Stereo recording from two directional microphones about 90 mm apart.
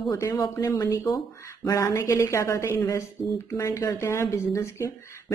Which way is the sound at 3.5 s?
40° left (ahead or behind).